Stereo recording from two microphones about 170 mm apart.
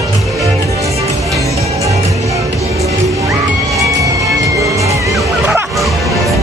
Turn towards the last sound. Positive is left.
turn(degrees=0)  # may be behind; listen again after turning